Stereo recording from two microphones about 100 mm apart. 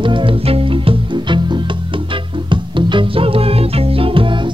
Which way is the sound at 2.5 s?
55° right (ahead or behind).